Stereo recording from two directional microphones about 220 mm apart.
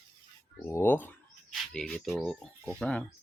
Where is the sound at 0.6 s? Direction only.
10° left (ahead or behind).